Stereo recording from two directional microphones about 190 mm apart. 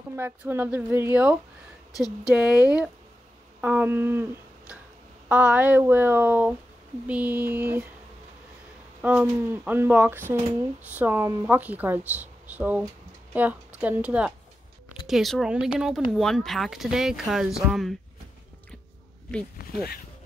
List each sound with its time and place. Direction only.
0.1 s speech: 10° right (ahead or behind)
3.6 s a sound: 10° right (ahead or behind)
5.3 s speech: 10° right (ahead or behind)
9.0 s speech: 10° right (ahead or behind)
19.6 s speech: 55° left (ahead or behind)